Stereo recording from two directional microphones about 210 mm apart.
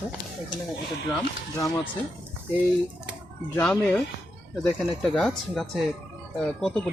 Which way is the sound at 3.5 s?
5° left (ahead or behind).